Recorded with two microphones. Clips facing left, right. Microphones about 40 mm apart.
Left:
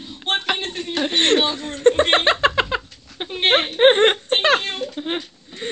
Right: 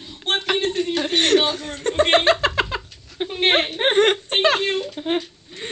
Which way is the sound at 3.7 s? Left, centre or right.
Left.